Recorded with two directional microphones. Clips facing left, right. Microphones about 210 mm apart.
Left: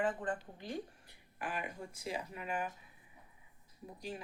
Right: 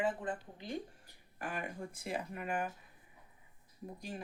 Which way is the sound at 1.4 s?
45° right (ahead or behind).